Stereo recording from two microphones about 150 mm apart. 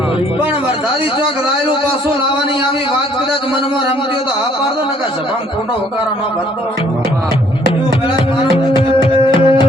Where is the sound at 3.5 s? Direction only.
35° left (ahead or behind).